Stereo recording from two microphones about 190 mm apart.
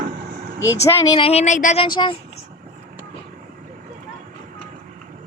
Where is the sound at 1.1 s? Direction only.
30° left (ahead or behind).